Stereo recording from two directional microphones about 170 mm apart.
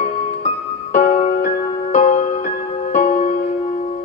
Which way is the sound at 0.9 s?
40° left (ahead or behind).